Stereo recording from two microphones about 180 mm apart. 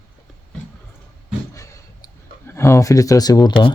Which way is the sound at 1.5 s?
15° left (ahead or behind).